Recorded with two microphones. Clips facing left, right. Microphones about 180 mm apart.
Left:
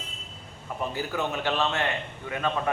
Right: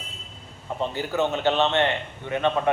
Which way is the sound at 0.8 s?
25° right (ahead or behind).